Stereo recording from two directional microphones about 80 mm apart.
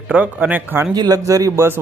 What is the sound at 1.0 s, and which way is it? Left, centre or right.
Speech, right.